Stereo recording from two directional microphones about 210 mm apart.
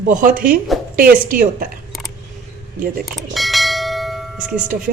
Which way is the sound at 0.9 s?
45° right (ahead or behind).